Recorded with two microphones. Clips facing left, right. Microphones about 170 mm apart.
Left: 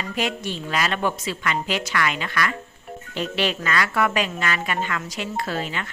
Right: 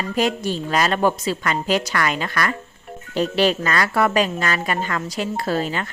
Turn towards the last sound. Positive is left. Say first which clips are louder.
# right 5 dB
turn(degrees=-40)  # may be behind; listen again after turning